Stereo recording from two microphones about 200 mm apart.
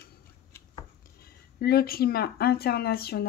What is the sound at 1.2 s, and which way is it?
Speech, 50° left (ahead or behind).